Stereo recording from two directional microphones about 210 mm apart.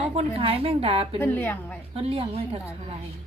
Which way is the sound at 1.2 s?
10° left (ahead or behind).